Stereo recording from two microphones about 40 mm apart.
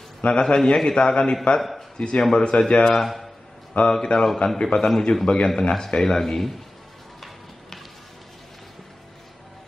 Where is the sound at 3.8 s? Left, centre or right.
Left.